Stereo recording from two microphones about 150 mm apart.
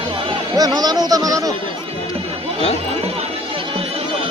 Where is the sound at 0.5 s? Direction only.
25° right (ahead or behind).